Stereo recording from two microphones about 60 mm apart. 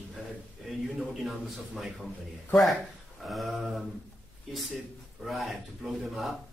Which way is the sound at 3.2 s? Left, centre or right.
Centre.